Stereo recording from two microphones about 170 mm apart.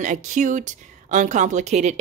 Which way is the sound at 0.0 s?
45° right (ahead or behind).